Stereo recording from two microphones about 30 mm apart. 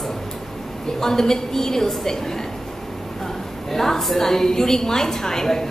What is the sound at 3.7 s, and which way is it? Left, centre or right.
A woman's voice, centre.